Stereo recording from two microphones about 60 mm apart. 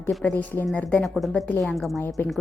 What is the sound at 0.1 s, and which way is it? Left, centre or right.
Speech, centre.